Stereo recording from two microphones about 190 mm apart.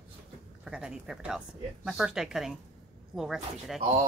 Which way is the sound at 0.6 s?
5° right (ahead or behind).